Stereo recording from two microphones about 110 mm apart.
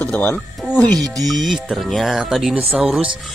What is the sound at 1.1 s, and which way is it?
Speech, centre (ahead or behind).